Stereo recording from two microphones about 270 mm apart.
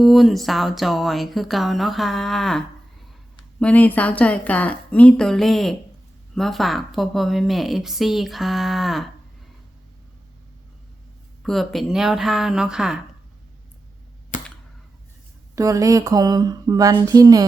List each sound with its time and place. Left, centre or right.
0.0 s a woman's voice: centre
11.4 s a woman's voice: centre
14.3 s cap gun: left
15.5 s speech: centre